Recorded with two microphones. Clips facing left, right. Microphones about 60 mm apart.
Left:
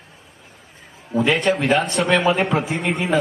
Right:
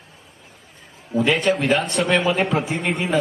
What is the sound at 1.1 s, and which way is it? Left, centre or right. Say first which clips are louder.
Speech: left 1 dB; left.